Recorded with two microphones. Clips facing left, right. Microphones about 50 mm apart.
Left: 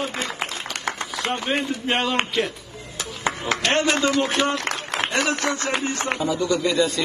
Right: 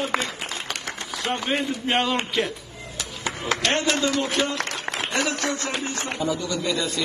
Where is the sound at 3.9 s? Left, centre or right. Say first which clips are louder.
Left 3 dB; left.